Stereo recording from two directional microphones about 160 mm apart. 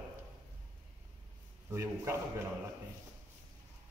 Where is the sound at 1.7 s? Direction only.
15° right (ahead or behind).